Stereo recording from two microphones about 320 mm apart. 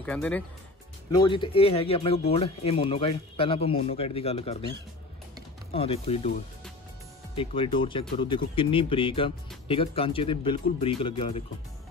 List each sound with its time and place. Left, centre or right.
0.0 s speech: centre
5.7 s speech: centre